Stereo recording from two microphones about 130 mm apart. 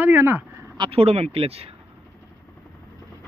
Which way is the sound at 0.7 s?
45° right (ahead or behind).